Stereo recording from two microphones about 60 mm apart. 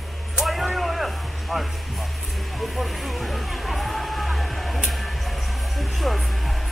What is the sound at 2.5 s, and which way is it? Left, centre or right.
Music, centre.